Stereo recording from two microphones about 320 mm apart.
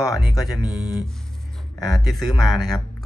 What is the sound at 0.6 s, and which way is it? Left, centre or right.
Speech, centre.